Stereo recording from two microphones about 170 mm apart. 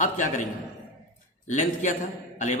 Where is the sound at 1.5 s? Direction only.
45° left (ahead or behind).